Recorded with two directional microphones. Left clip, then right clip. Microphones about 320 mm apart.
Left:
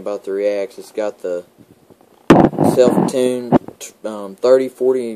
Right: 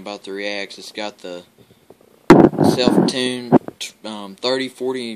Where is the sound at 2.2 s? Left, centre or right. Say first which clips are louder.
Even; left.